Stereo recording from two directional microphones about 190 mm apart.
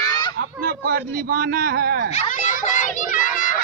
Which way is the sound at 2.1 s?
40° left (ahead or behind).